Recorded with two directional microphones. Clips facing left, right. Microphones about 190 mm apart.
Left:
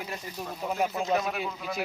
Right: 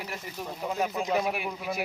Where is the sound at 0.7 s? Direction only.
10° left (ahead or behind).